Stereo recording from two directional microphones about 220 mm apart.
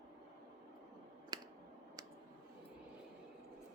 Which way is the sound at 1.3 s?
20° right (ahead or behind).